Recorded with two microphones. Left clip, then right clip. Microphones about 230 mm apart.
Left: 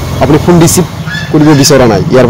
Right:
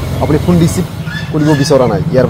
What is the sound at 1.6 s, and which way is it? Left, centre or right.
Speech, left.